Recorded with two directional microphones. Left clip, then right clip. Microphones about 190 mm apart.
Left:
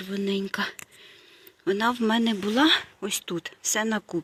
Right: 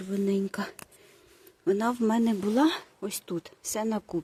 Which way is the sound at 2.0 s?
Centre (ahead or behind).